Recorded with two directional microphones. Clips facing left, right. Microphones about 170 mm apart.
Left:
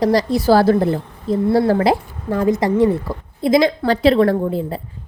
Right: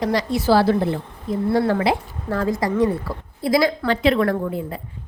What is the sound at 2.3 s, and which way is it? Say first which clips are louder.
A woman's voice: left 5 dB; 20° left (ahead or behind).